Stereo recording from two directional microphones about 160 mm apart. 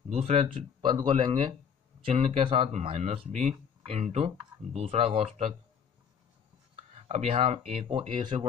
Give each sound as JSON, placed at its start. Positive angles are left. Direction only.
{"t": 0.1, "sound": "speech", "side_deg": -40}
{"t": 6.9, "sound": "speech", "side_deg": -45}